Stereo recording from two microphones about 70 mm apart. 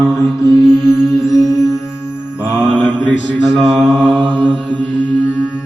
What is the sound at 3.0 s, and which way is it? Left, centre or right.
Mantra, centre.